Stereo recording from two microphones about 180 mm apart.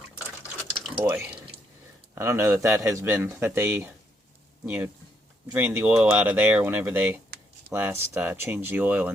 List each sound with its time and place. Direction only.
0.9 s speech: 20° right (ahead or behind)
1.3 s drip: 5° right (ahead or behind)
2.1 s speech: 15° right (ahead or behind)